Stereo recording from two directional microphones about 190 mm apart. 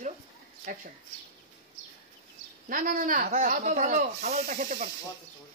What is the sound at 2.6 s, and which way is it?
Speech, 45° right (ahead or behind).